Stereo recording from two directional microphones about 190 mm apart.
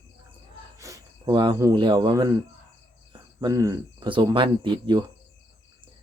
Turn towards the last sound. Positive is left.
turn(degrees=-25)  # may be behind; listen again after turning